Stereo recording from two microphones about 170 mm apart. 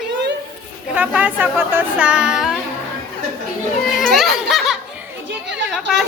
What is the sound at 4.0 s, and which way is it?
Music, centre (ahead or behind).